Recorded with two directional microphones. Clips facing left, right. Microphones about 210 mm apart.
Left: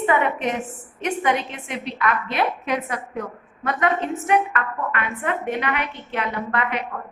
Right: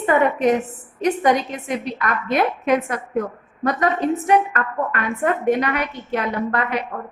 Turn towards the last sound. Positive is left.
turn(degrees=-30)  # may be behind; listen again after turning